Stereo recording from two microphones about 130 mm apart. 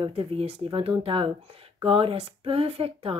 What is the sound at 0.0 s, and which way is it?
Speech, 50° right (ahead or behind).